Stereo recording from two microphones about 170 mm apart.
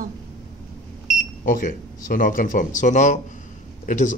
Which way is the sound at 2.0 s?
55° left (ahead or behind).